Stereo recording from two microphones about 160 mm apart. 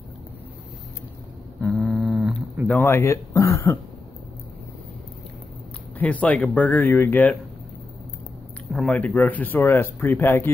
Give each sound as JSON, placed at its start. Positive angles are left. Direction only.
{"t": 1.6, "sound": "a sound", "side_deg": 0}
{"t": 2.7, "sound": "speech", "side_deg": 15}
{"t": 5.9, "sound": "speech", "side_deg": 10}
{"t": 8.7, "sound": "speech", "side_deg": 10}